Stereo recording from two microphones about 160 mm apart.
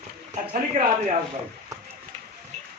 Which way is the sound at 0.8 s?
45° right (ahead or behind).